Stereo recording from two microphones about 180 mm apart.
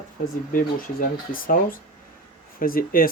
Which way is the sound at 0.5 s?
50° left (ahead or behind).